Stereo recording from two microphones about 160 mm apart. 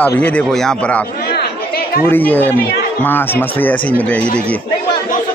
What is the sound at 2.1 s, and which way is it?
A man's voice, 10° left (ahead or behind).